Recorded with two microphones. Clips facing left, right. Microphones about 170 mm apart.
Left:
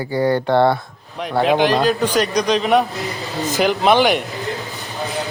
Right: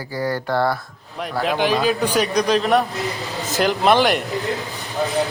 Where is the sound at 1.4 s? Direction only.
Centre (ahead or behind).